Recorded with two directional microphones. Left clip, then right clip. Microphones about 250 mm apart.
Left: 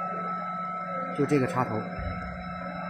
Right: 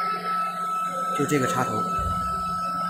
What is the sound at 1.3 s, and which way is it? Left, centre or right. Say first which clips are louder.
Speech: even; centre.